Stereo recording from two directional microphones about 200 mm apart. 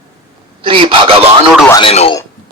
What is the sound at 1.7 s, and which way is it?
Speech, 25° left (ahead or behind).